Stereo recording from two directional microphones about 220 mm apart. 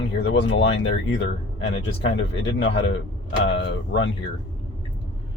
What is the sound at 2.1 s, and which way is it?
Speech, 55° left (ahead or behind).